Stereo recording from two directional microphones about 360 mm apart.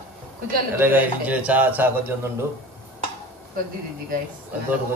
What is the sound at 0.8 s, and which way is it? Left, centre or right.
A man's voice, centre.